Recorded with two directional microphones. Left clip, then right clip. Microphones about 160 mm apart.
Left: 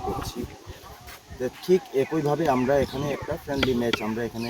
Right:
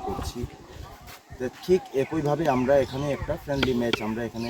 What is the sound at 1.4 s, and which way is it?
Speech, centre (ahead or behind).